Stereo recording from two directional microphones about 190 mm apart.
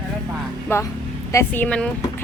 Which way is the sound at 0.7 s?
15° left (ahead or behind).